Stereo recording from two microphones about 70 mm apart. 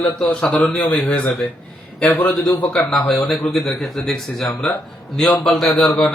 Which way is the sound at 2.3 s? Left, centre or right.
Centre.